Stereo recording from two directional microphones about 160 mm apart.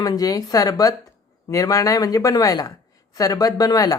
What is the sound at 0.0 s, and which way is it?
Speech, 25° left (ahead or behind).